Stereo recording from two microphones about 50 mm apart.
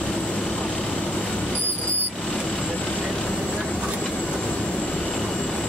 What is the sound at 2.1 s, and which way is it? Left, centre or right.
Vehicle, centre.